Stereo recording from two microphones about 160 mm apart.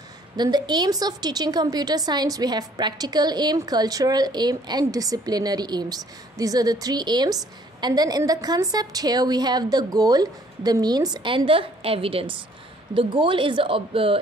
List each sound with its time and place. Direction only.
0.4 s a woman's voice: 25° right (ahead or behind)